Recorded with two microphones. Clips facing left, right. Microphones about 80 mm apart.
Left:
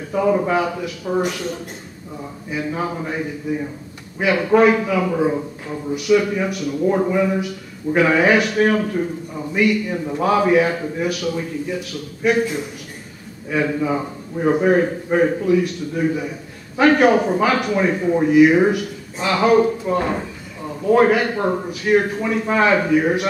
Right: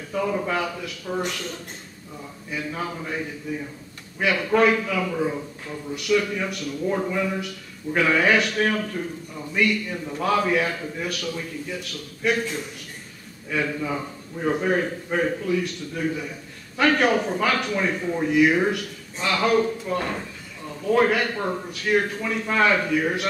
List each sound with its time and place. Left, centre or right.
0.1 s a man's voice: centre